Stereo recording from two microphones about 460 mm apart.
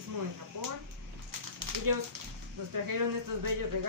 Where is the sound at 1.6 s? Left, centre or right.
Right.